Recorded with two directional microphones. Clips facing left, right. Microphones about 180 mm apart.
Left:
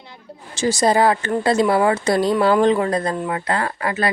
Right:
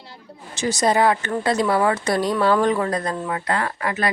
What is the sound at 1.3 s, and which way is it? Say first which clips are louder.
Speech: left 3 dB; 25° left (ahead or behind).